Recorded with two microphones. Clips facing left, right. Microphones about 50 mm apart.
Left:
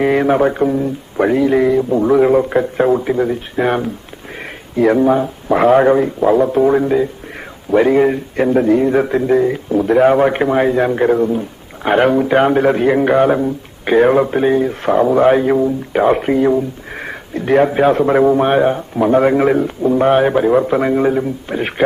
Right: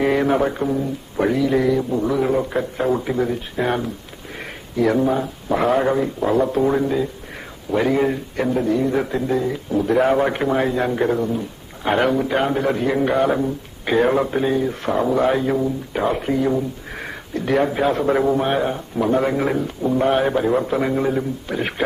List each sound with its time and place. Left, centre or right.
0.0 s a man's voice: left
3.0 s a man's voice: left
3.6 s a man's voice: left
8.4 s a man's voice: left
9.8 s a man's voice: left
10.2 s a man's voice: left